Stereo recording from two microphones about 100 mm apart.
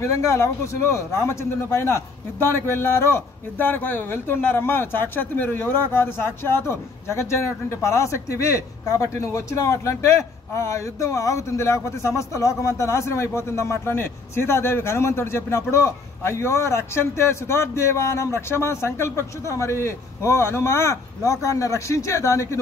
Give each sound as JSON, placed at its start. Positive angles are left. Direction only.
{"t": 0.0, "sound": "a man's voice", "side_deg": 30}